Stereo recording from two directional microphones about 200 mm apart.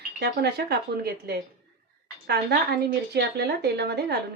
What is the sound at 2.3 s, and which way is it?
A woman's voice, 55° right (ahead or behind).